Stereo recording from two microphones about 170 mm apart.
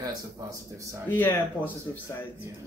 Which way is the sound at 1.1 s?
10° left (ahead or behind).